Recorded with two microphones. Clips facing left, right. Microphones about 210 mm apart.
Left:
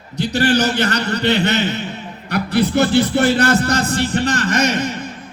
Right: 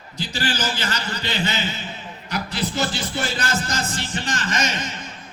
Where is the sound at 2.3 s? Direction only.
60° left (ahead or behind).